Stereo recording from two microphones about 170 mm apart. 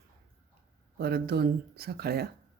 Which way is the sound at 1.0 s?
65° right (ahead or behind).